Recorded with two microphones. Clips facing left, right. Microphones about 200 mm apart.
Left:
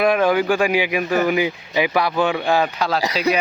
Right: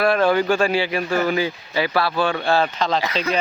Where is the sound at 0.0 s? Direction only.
15° left (ahead or behind).